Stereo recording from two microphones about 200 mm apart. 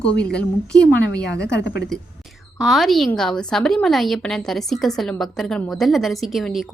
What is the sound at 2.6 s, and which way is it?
Speech, centre (ahead or behind).